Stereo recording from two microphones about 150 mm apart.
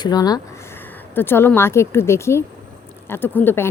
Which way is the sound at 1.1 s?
15° left (ahead or behind).